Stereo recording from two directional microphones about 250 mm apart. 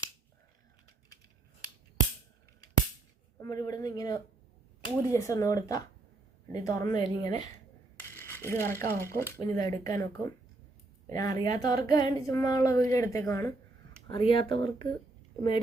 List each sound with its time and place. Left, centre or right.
3.4 s speech: centre
7.9 s a sound: centre
9.0 s speech: centre